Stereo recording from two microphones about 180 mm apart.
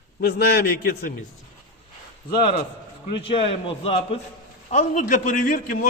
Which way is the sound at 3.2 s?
30° left (ahead or behind).